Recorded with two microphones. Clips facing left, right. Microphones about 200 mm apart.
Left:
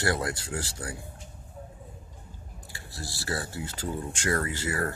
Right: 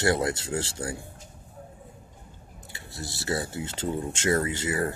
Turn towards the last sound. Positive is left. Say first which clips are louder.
# right 3 dB
turn(degrees=-20)  # may be behind; listen again after turning